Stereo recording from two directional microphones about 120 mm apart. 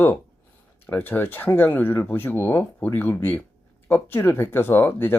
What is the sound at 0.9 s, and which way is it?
Speech, 15° left (ahead or behind).